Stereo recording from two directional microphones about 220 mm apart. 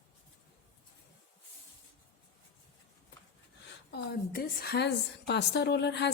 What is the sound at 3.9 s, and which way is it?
A woman's voice, 50° left (ahead or behind).